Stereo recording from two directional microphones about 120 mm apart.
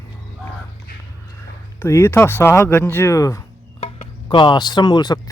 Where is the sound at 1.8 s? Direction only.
20° left (ahead or behind).